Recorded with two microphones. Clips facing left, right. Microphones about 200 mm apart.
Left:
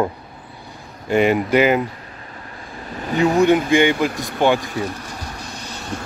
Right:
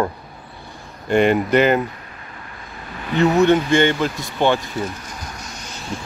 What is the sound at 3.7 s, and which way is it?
Speech, 10° left (ahead or behind).